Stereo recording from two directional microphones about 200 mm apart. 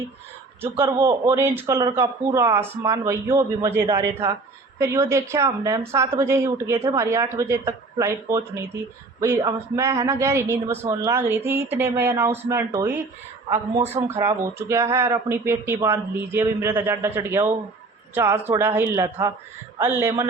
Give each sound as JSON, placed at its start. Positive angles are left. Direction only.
{"t": 1.0, "sound": "a woman's voice", "side_deg": -10}